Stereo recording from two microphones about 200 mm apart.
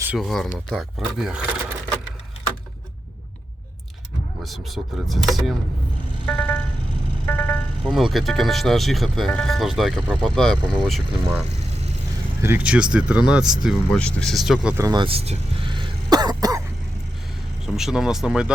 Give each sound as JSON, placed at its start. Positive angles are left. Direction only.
{"t": 0.0, "sound": "speech", "side_deg": -5}
{"t": 4.4, "sound": "speech", "side_deg": 0}
{"t": 6.2, "sound": "music", "side_deg": 5}
{"t": 7.3, "sound": "speech", "side_deg": 5}
{"t": 14.8, "sound": "throat clearing", "side_deg": -25}
{"t": 17.7, "sound": "speech", "side_deg": 0}